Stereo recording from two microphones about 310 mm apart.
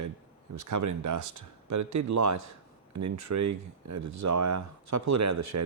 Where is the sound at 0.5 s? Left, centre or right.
Right.